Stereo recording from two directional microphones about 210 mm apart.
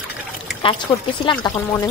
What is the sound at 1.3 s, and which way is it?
Speech, 20° left (ahead or behind).